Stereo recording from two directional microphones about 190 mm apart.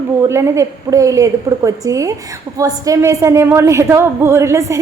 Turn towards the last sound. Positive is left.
turn(degrees=-15)  # may be behind; listen again after turning